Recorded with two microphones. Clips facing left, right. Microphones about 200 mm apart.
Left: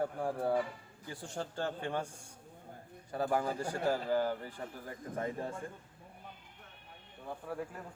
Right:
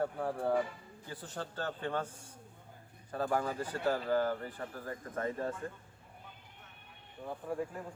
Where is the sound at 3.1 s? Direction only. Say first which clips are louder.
Even; 15° left (ahead or behind).